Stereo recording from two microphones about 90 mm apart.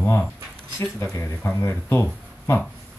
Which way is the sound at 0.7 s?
35° left (ahead or behind).